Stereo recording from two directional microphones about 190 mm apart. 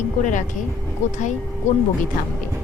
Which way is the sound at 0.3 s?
40° left (ahead or behind).